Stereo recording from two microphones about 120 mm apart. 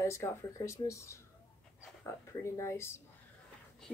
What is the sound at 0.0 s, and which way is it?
Speech, 25° left (ahead or behind).